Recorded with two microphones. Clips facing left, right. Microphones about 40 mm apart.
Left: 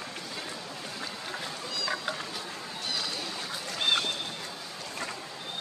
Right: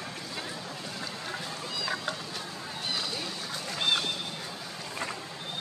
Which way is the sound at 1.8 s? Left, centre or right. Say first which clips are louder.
Left 1 dB; centre.